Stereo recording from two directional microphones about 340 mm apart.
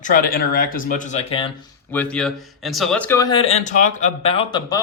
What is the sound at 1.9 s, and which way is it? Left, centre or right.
Speech, centre.